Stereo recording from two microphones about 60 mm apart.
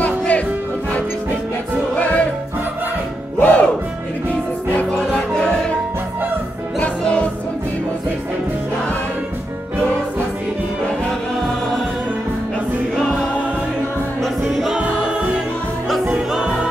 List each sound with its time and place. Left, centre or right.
0.0 s music: left
2.0 s music: left
3.3 s music: left
4.7 s music: left
6.8 s music: centre
12.9 s choir: centre
14.2 s music: centre
14.8 s music: centre